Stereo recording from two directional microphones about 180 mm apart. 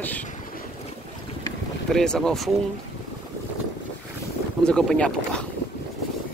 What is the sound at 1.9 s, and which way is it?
Speech, 5° left (ahead or behind).